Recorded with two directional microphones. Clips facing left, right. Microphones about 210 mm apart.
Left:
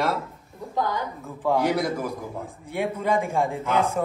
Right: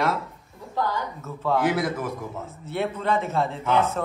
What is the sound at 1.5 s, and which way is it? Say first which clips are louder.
Speech: right 1 dB; centre (ahead or behind).